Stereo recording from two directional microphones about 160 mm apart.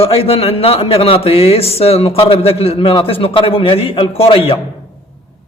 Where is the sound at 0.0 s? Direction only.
35° left (ahead or behind).